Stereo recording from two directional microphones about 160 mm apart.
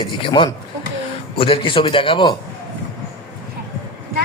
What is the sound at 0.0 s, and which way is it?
A man's voice, 30° left (ahead or behind).